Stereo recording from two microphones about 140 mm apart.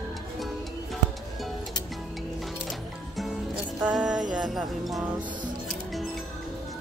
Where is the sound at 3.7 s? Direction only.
5° right (ahead or behind).